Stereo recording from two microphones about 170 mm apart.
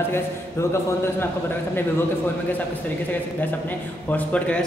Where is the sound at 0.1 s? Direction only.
15° left (ahead or behind).